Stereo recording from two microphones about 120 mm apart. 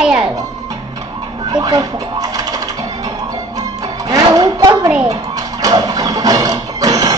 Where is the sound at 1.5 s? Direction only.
35° right (ahead or behind).